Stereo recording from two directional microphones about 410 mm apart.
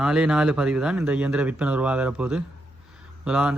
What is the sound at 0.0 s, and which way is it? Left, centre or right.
Speech, centre.